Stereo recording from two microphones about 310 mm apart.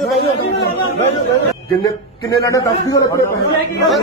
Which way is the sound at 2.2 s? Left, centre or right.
Centre.